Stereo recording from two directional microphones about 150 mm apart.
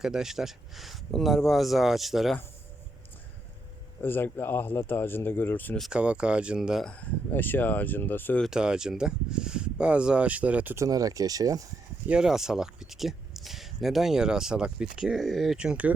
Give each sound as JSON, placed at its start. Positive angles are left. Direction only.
{"t": 0.0, "sound": "speech", "side_deg": -5}
{"t": 4.0, "sound": "speech", "side_deg": 15}
{"t": 5.8, "sound": "speech", "side_deg": -5}
{"t": 8.4, "sound": "speech", "side_deg": -5}
{"t": 10.8, "sound": "speech", "side_deg": -25}
{"t": 12.0, "sound": "speech", "side_deg": -5}